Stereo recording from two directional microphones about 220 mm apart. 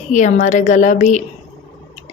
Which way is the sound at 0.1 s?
35° left (ahead or behind).